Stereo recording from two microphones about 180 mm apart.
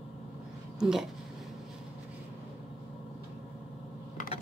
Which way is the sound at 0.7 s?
5° right (ahead or behind).